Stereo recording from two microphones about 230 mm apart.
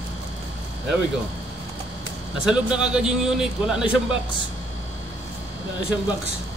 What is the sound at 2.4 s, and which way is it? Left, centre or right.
A man's voice, centre.